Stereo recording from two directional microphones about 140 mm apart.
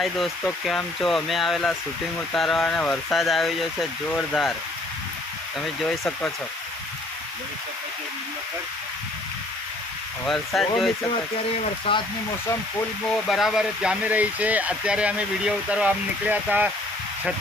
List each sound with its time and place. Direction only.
0.6 s speech: centre (ahead or behind)
5.5 s speech: centre (ahead or behind)
10.2 s speech: 5° left (ahead or behind)
11.9 s speech: 40° left (ahead or behind)
13.1 s speech: centre (ahead or behind)